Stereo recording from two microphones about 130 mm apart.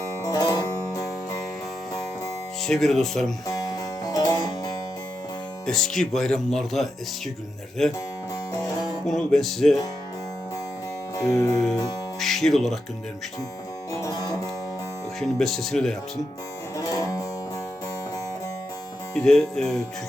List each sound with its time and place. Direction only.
0.2 s music: 25° left (ahead or behind)
2.6 s speech: centre (ahead or behind)
4.0 s music: 30° left (ahead or behind)
5.6 s speech: 5° left (ahead or behind)
9.0 s speech: centre (ahead or behind)
11.2 s music: 25° left (ahead or behind)
11.5 s speech: 5° left (ahead or behind)
13.9 s music: 25° left (ahead or behind)
15.2 s speech: centre (ahead or behind)
16.9 s music: 25° left (ahead or behind)
19.1 s speech: 5° left (ahead or behind)